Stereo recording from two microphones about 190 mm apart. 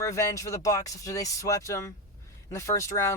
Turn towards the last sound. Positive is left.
turn(degrees=15)  # may be behind; listen again after turning